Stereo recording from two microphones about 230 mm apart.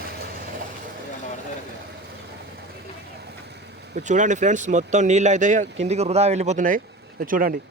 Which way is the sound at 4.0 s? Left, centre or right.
Right.